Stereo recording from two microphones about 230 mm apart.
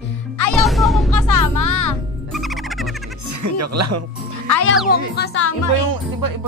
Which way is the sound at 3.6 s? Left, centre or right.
Right.